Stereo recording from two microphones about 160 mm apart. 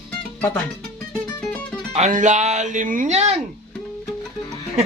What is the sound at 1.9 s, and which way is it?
Speech, 50° right (ahead or behind).